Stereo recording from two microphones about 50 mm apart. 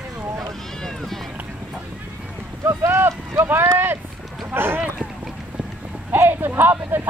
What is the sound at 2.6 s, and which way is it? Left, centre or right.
Speech, right.